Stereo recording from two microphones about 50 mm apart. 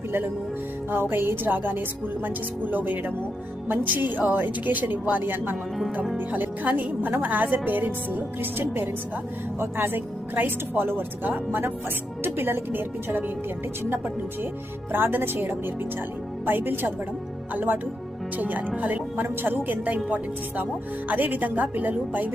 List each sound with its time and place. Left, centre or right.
0.9 s speech: right
14.9 s speech: right